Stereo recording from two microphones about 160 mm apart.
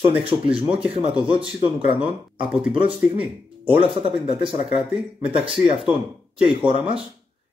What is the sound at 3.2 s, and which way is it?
Speech, 35° right (ahead or behind).